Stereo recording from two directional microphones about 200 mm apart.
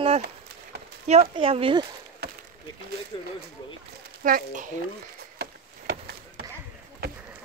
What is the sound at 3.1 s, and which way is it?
Speech, 25° left (ahead or behind).